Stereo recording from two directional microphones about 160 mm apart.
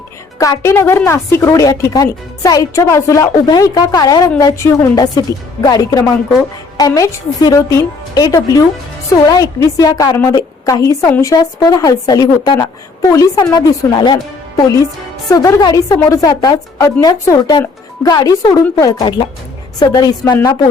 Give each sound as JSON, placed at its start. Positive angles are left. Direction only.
{"t": 0.3, "sound": "a woman's voice", "side_deg": 20}